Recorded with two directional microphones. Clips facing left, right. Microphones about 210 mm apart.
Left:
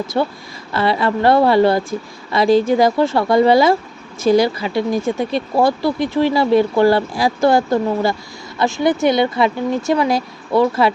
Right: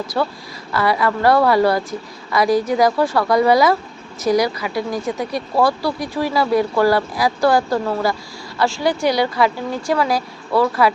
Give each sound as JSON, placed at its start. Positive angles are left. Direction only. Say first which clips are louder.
{"t": 0.1, "sound": "speech", "louder": "left 2 dB", "side_deg": 25}